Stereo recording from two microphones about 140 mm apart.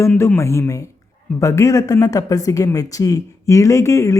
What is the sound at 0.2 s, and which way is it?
Speech, 20° left (ahead or behind).